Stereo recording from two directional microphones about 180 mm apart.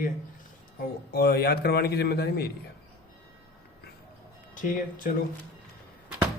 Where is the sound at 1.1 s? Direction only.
60° left (ahead or behind).